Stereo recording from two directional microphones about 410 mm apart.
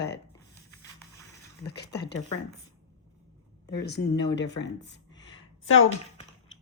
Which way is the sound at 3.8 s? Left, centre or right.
Left.